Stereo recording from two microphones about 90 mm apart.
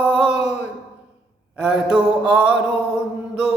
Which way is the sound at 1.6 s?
10° right (ahead or behind).